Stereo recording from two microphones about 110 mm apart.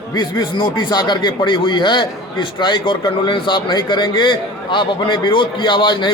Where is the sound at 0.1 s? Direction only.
40° left (ahead or behind).